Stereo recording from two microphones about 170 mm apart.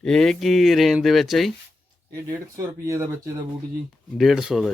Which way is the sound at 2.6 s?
20° right (ahead or behind).